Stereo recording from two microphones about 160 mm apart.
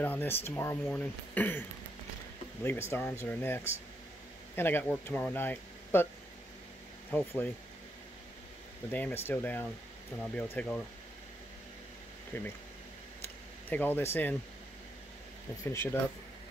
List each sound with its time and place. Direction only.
0.0 s speech: 10° left (ahead or behind)
2.6 s speech: 15° left (ahead or behind)
7.1 s speech: 10° left (ahead or behind)
8.9 s speech: 10° left (ahead or behind)
12.3 s speech: 15° left (ahead or behind)
13.7 s speech: 10° left (ahead or behind)
15.6 s speech: 15° left (ahead or behind)